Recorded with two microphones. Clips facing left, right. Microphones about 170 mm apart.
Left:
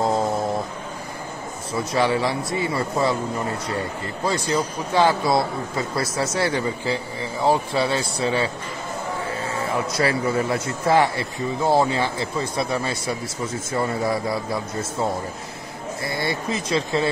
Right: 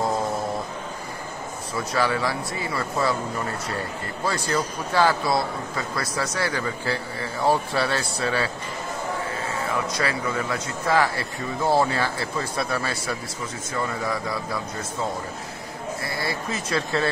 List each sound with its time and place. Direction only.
2.0 s speech: 25° left (ahead or behind)
4.3 s speech: 20° left (ahead or behind)
9.9 s speech: 30° left (ahead or behind)
13.7 s speech: 30° left (ahead or behind)
16.3 s speech: 20° left (ahead or behind)